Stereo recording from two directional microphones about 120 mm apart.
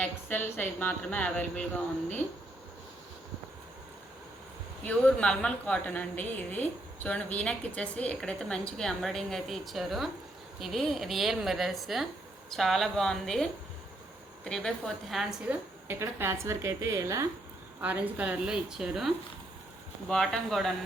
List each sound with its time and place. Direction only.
0.0 s a woman's voice: 15° left (ahead or behind)
4.9 s a woman's voice: 10° left (ahead or behind)
15.9 s a woman's voice: 20° right (ahead or behind)
17.7 s a woman's voice: 15° right (ahead or behind)